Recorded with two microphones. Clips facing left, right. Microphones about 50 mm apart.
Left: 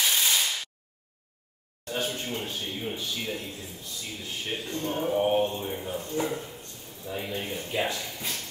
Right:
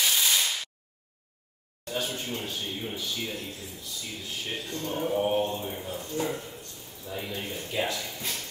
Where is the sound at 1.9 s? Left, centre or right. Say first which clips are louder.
Left 1 dB; left.